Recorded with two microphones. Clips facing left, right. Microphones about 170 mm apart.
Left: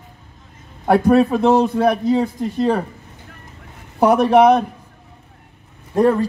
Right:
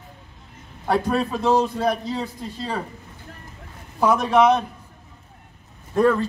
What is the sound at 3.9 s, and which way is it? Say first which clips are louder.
Speech: left 5 dB; 60° left (ahead or behind).